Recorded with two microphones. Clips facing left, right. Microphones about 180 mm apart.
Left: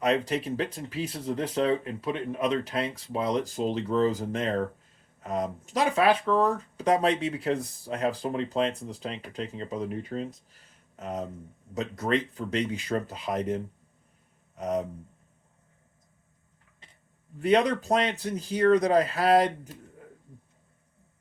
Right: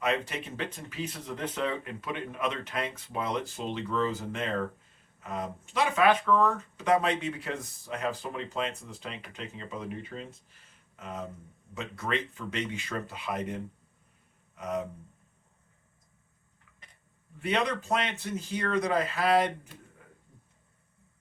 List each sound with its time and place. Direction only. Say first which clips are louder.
0.0 s speech: left 5 dB; 35° left (ahead or behind)
17.4 s speech: left 7 dB; 35° left (ahead or behind)